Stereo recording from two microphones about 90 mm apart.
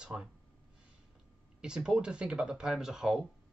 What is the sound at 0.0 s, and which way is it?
Speech, 10° right (ahead or behind).